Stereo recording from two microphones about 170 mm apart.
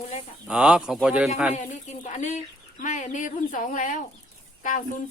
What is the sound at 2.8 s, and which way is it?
Speech, 50° left (ahead or behind).